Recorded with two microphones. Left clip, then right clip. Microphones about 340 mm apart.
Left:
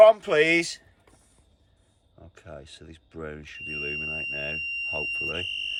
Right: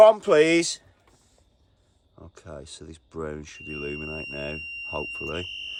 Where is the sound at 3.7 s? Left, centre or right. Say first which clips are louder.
Left 3 dB; right.